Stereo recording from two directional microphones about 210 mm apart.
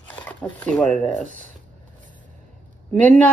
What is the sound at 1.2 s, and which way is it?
Speech, 35° right (ahead or behind).